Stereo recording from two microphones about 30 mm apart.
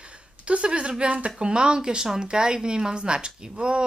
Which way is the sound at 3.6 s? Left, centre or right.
Right.